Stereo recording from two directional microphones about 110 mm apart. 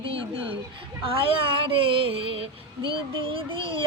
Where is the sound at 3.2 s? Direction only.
55° right (ahead or behind).